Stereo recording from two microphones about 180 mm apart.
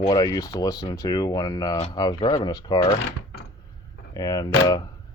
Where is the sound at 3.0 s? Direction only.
65° left (ahead or behind).